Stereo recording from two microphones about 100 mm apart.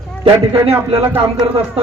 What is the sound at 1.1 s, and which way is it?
Speech, 65° right (ahead or behind).